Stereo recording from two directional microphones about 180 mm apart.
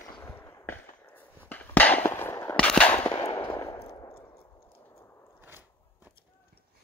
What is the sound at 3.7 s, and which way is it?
Clang, 25° left (ahead or behind).